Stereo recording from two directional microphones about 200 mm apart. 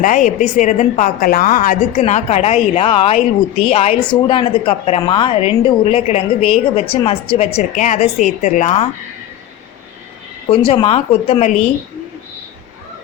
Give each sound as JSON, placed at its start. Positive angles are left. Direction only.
{"t": 0.0, "sound": "a woman's voice", "side_deg": 40}
{"t": 10.5, "sound": "speech", "side_deg": 25}